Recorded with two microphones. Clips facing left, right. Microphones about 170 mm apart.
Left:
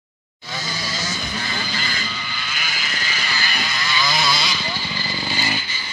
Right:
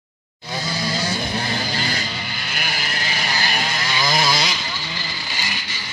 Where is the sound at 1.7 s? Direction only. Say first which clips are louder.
Right 3 dB; 60° right (ahead or behind).